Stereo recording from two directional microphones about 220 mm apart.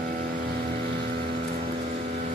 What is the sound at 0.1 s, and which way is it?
Vehicle, 40° right (ahead or behind).